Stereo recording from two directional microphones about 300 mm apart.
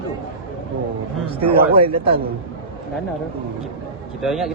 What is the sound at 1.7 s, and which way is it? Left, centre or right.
Speech, centre.